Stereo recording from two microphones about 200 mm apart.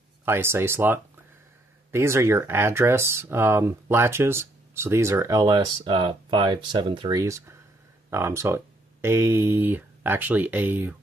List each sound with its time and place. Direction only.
0.2 s speech: 10° right (ahead or behind)